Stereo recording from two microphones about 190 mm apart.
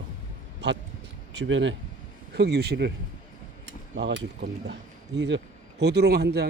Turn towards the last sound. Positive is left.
turn(degrees=-55)  # may be behind; listen again after turning